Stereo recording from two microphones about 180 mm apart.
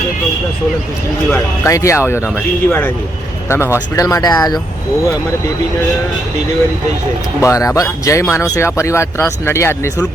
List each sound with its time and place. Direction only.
1.3 s speech: 15° left (ahead or behind)
7.4 s speech: 15° left (ahead or behind)